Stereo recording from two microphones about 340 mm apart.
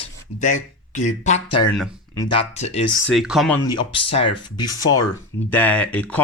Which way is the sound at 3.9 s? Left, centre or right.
Centre.